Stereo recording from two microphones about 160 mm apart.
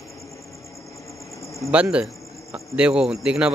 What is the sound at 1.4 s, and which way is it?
Cricket, 20° left (ahead or behind).